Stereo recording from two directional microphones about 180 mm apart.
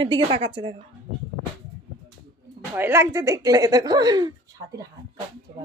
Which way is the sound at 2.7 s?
15° right (ahead or behind).